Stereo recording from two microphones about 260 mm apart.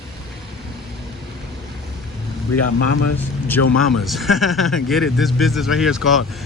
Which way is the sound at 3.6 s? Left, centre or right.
Left.